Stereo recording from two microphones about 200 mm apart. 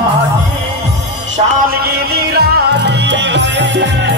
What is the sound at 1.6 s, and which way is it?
Music, 50° right (ahead or behind).